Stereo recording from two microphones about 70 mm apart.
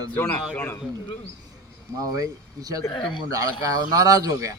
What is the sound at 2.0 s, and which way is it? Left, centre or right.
Speech, right.